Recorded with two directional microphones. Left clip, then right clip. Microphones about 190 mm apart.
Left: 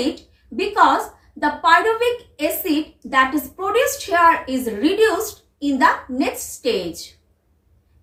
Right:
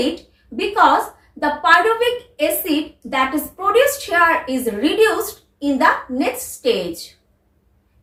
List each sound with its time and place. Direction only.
0.0 s a woman's voice: 15° left (ahead or behind)